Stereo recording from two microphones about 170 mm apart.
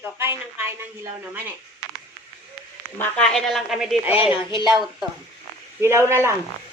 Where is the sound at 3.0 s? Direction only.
5° left (ahead or behind).